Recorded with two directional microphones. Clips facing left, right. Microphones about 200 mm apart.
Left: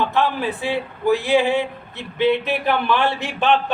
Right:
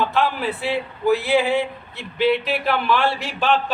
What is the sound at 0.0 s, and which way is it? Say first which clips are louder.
Speech: left 1 dB; 20° left (ahead or behind).